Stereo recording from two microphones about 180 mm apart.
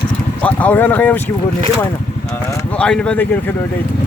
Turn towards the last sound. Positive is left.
turn(degrees=10)  # may be behind; listen again after turning